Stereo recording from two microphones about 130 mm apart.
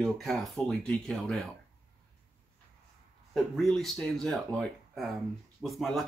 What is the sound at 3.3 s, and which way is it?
Speech, centre (ahead or behind).